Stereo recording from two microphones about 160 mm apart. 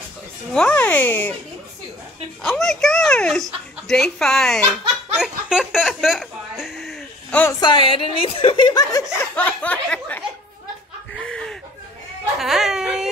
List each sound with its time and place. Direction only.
0.6 s a sound: 10° left (ahead or behind)
2.4 s a child's voice: 5° left (ahead or behind)
5.1 s chuckle: 5° right (ahead or behind)
7.6 s a woman's voice: 35° left (ahead or behind)
9.2 s a sound: 10° left (ahead or behind)
11.1 s chuckle: 5° left (ahead or behind)
12.4 s speech: centre (ahead or behind)